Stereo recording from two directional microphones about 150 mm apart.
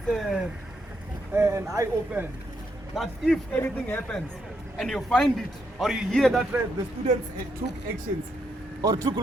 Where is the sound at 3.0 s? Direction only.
5° left (ahead or behind).